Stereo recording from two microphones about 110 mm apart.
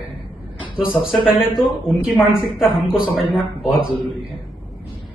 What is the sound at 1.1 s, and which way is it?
Speech, 5° right (ahead or behind).